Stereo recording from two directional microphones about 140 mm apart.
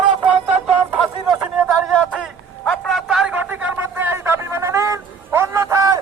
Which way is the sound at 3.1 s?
5° right (ahead or behind).